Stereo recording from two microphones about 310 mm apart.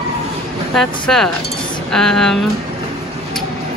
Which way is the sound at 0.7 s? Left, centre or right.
Centre.